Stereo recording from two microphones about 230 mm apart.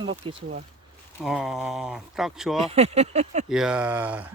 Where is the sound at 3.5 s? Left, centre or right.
Centre.